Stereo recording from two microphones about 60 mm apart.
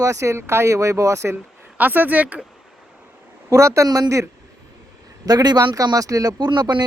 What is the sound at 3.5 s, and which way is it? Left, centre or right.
Speech, right.